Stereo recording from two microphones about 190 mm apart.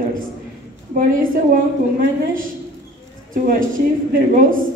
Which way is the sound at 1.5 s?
45° right (ahead or behind).